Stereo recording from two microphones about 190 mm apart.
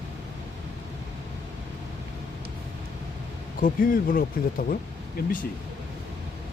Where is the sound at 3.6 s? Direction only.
50° left (ahead or behind).